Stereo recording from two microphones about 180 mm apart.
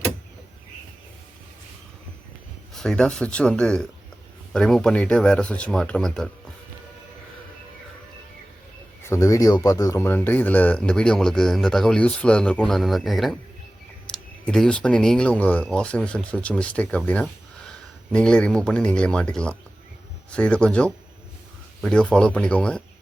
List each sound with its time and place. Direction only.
2.7 s speech: 5° left (ahead or behind)
9.0 s speech: 15° left (ahead or behind)
18.1 s speech: 5° left (ahead or behind)